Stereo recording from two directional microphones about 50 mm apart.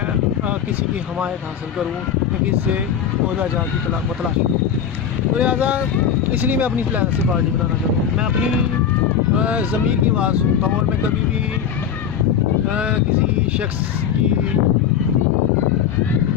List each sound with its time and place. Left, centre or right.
5.4 s speech: right
9.3 s speech: right